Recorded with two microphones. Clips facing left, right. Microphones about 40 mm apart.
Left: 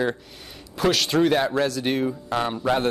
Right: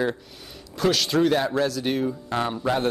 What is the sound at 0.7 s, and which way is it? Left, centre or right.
Speech, centre.